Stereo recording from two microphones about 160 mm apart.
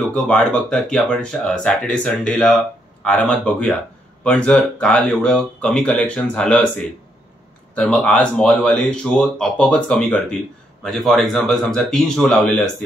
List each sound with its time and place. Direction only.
0.1 s speech: 5° left (ahead or behind)